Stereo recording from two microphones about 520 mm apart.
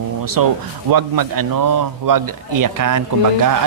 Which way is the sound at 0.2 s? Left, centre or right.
Right.